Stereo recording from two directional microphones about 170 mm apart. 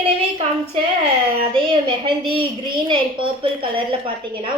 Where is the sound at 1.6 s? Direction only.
30° right (ahead or behind).